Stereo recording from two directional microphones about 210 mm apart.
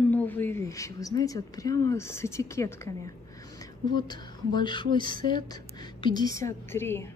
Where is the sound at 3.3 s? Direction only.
15° left (ahead or behind).